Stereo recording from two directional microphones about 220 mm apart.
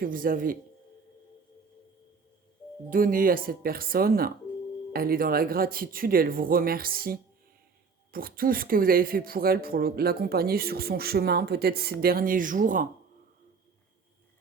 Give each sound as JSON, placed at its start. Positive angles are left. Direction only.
{"t": 0.0, "sound": "speech", "side_deg": -40}
{"t": 2.9, "sound": "speech", "side_deg": -40}